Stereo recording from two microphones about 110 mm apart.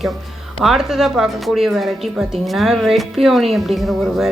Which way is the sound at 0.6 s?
5° right (ahead or behind).